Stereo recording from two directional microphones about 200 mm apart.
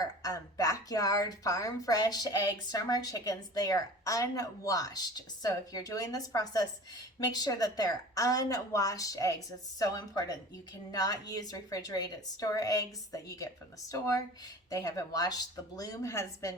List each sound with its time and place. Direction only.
0.0 s a woman's voice: 20° left (ahead or behind)